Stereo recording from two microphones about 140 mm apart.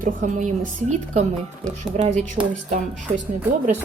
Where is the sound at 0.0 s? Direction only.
65° right (ahead or behind).